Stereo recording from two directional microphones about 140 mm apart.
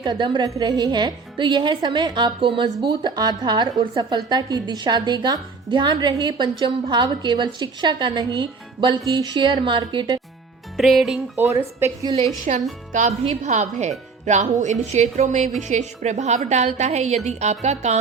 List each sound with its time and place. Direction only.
0.0 s a woman's voice: 35° right (ahead or behind)
10.8 s music: centre (ahead or behind)
11.3 s a woman's voice: 20° right (ahead or behind)
12.5 s a woman's voice: 55° right (ahead or behind)